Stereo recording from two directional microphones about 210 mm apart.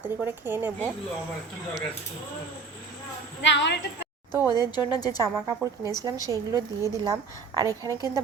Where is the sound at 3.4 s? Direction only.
60° left (ahead or behind).